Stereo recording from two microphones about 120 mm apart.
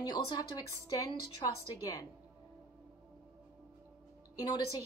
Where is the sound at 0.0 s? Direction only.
35° left (ahead or behind).